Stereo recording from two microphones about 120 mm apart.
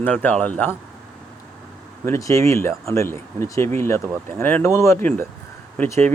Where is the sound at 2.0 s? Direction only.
25° left (ahead or behind).